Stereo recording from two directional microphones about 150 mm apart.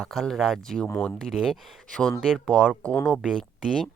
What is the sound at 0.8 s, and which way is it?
Speech, 10° left (ahead or behind).